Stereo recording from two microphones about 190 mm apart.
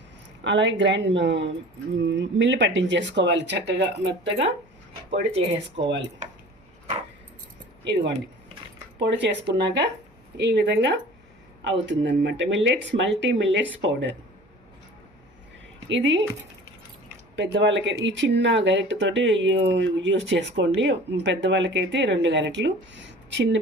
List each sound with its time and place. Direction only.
0.4 s speech: 70° right (ahead or behind)
5.3 s speech: 30° right (ahead or behind)
9.0 s speech: 65° right (ahead or behind)
15.9 s speech: 75° right (ahead or behind)
17.3 s speech: 70° right (ahead or behind)